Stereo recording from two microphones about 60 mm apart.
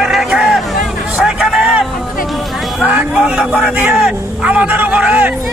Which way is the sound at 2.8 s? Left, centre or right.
Centre.